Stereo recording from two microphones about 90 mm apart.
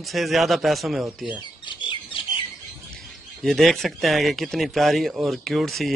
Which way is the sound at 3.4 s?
Centre (ahead or behind).